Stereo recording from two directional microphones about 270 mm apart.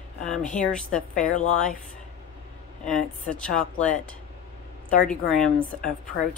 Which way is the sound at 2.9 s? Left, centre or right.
Centre.